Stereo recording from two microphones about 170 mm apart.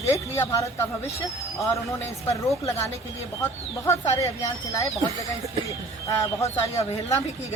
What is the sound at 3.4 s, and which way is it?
Speech, 15° left (ahead or behind).